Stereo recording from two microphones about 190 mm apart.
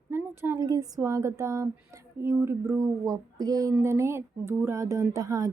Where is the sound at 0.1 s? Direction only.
10° right (ahead or behind).